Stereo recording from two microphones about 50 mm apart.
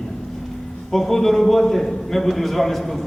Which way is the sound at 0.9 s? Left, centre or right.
Centre.